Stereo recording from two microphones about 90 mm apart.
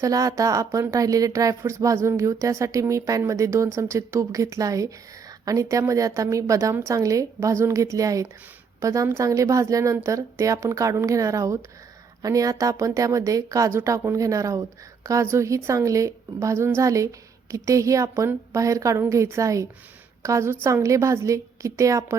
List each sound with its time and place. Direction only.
0.0 s speech: 40° right (ahead or behind)